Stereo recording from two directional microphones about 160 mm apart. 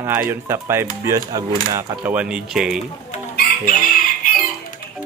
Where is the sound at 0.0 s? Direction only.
15° right (ahead or behind).